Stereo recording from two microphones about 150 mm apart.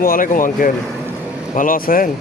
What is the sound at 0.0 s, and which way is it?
Speech, 70° left (ahead or behind).